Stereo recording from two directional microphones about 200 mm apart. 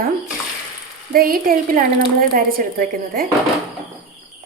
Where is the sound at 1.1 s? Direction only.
45° right (ahead or behind).